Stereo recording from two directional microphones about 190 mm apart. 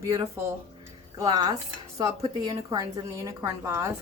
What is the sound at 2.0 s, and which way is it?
A woman's voice, 20° right (ahead or behind).